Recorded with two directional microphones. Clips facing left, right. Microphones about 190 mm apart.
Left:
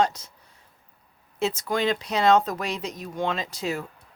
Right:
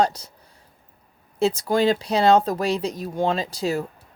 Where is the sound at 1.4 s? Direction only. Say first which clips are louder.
Right 5 dB; 35° right (ahead or behind).